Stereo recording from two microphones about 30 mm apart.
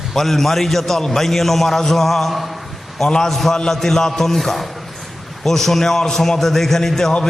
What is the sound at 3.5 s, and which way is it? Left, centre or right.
A man's voice, centre.